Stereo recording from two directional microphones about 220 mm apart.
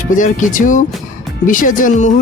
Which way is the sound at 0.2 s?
35° left (ahead or behind).